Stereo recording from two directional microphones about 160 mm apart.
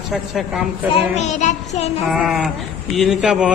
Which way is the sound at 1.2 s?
45° left (ahead or behind).